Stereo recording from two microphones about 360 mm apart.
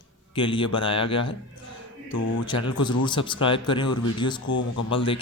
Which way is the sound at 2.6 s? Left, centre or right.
Centre.